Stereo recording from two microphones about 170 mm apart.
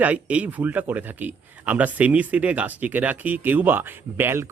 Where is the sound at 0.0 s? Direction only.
10° right (ahead or behind).